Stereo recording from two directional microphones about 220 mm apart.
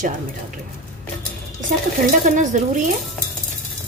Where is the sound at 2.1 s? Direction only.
35° right (ahead or behind).